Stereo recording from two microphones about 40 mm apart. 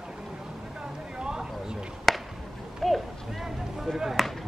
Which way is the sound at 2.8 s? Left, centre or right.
Centre.